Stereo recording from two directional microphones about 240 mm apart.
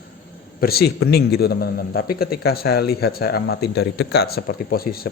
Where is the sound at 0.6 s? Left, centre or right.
Left.